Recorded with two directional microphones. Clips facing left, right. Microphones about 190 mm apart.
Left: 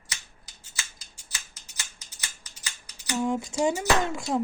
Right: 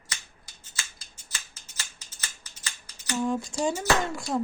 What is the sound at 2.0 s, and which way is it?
Computer keyboard, 15° left (ahead or behind).